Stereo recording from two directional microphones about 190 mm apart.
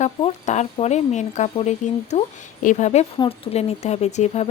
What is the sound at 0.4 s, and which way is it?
Speech, 35° left (ahead or behind).